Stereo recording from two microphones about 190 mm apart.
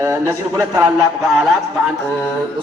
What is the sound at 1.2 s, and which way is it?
Speech, centre (ahead or behind).